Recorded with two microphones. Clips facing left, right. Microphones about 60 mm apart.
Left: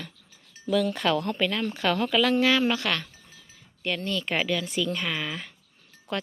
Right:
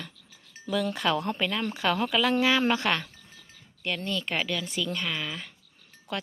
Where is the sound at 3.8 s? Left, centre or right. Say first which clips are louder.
Left 2 dB; centre.